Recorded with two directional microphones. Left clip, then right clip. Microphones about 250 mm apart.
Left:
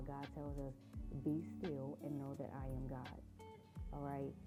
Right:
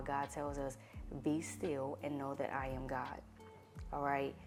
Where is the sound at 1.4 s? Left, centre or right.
Centre.